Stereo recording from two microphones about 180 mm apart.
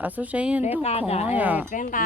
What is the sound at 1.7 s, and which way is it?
Speech, 45° left (ahead or behind).